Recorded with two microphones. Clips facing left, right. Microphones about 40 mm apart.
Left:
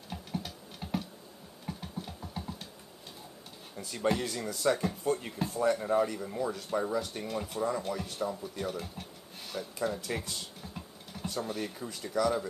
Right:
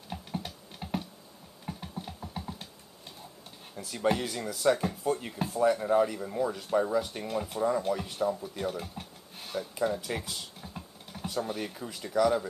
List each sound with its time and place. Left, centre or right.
0.1 s typing: centre
1.7 s a sound: centre
3.7 s speech: centre